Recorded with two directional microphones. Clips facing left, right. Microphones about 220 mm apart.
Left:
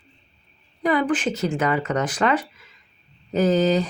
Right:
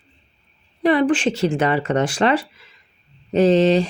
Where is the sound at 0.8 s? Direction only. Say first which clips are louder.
Right 5 dB; 30° right (ahead or behind).